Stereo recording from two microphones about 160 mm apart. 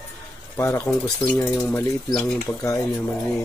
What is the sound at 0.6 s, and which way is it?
Speech, 15° left (ahead or behind).